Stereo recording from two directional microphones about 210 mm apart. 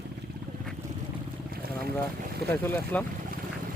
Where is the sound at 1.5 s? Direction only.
45° right (ahead or behind).